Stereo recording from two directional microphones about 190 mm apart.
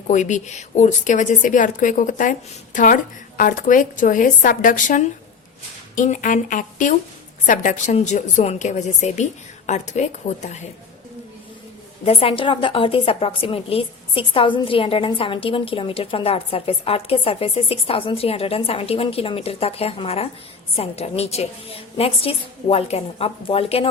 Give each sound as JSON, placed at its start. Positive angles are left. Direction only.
{"t": 0.1, "sound": "a woman's voice", "side_deg": 40}
{"t": 12.0, "sound": "a woman's voice", "side_deg": 30}